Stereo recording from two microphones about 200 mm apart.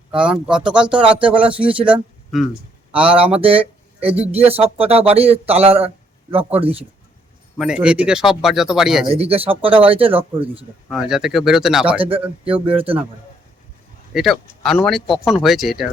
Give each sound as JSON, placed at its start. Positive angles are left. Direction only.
{"t": 0.1, "sound": "speech", "side_deg": -5}
{"t": 3.3, "sound": "speech", "side_deg": -30}
{"t": 7.6, "sound": "speech", "side_deg": -5}
{"t": 9.1, "sound": "speech", "side_deg": -30}
{"t": 10.8, "sound": "speech", "side_deg": 0}
{"t": 12.5, "sound": "speech", "side_deg": -25}
{"t": 14.1, "sound": "speech", "side_deg": 0}